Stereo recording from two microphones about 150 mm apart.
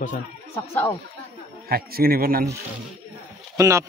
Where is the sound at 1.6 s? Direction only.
85° right.